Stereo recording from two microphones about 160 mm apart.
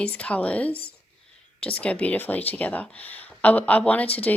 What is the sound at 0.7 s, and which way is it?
Speech, 75° left (ahead or behind).